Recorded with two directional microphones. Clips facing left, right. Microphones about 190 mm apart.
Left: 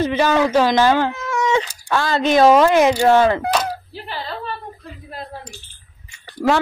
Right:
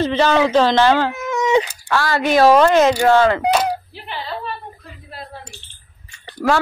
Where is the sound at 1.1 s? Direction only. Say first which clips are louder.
Right 2 dB; 20° right (ahead or behind).